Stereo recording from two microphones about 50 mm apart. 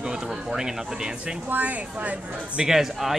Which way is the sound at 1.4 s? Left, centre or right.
Right.